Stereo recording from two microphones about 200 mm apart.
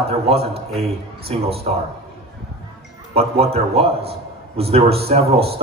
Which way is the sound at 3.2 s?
30° right (ahead or behind).